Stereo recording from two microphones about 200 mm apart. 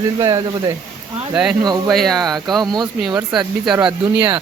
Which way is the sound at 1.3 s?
5° right (ahead or behind).